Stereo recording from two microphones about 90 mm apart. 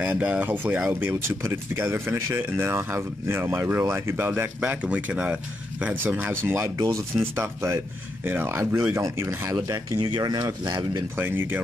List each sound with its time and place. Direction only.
0.0 s speech: 15° right (ahead or behind)
1.2 s speech: 30° right (ahead or behind)
6.6 s speech: 35° right (ahead or behind)
7.2 s speech: 25° right (ahead or behind)
9.6 s speech: 45° right (ahead or behind)
11.1 s speech: 25° right (ahead or behind)